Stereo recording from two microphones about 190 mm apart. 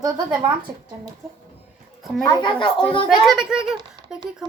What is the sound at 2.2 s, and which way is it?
Speech, 25° left (ahead or behind).